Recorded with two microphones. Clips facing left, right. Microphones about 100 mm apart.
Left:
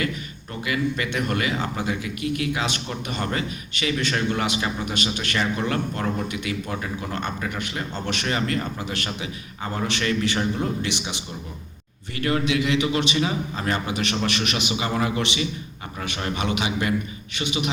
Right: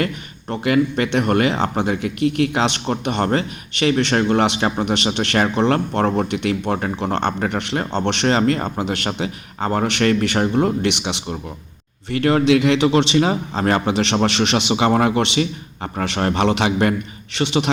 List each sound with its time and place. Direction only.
0.6 s a man's voice: 55° right (ahead or behind)
12.6 s a man's voice: 35° right (ahead or behind)
13.1 s speech: 45° right (ahead or behind)
13.8 s a man's voice: 25° right (ahead or behind)
14.8 s a man's voice: 60° right (ahead or behind)
17.3 s a man's voice: 75° right (ahead or behind)